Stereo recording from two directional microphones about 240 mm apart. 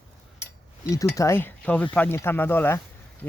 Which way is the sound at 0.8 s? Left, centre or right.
Centre.